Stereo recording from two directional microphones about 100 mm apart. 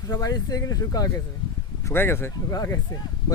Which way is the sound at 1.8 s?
25° left (ahead or behind).